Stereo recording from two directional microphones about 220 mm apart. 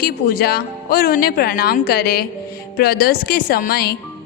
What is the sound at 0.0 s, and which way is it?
Speech, 45° left (ahead or behind).